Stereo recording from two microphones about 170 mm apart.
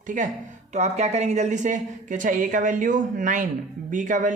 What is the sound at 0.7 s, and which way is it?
Speech, 40° right (ahead or behind).